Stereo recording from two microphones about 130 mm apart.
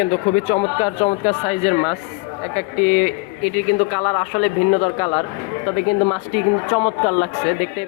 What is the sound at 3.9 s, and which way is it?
Speech, 45° left (ahead or behind).